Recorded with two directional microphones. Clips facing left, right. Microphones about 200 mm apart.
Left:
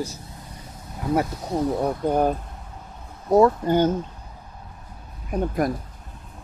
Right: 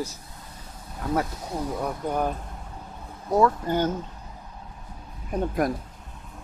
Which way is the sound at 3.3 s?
25° left (ahead or behind).